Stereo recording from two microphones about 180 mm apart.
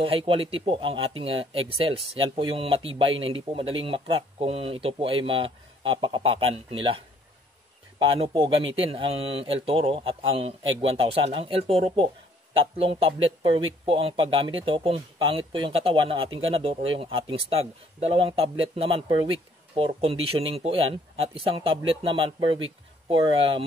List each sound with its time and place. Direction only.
0.0 s speech: 30° right (ahead or behind)
8.1 s speech: 30° right (ahead or behind)